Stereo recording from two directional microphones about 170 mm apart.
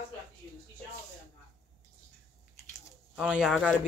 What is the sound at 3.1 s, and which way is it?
Speech, 5° right (ahead or behind).